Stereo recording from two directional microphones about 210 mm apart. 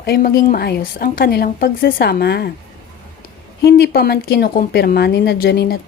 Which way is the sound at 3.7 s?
55° left (ahead or behind).